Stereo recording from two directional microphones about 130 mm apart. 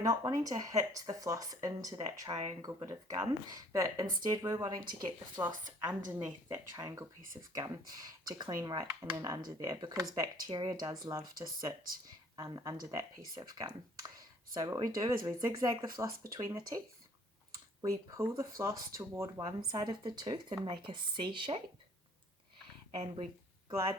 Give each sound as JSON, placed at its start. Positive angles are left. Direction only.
{"t": 0.0, "sound": "speech", "side_deg": -30}
{"t": 17.8, "sound": "speech", "side_deg": -25}
{"t": 19.5, "sound": "speech", "side_deg": -35}